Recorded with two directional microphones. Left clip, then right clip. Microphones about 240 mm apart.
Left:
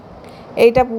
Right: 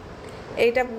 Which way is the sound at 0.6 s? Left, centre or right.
Left.